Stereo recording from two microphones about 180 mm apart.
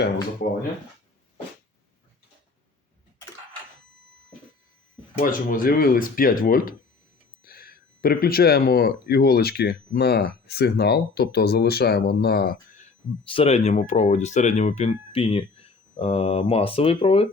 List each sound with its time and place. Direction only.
5.2 s speech: 50° left (ahead or behind)
13.2 s speech: 30° left (ahead or behind)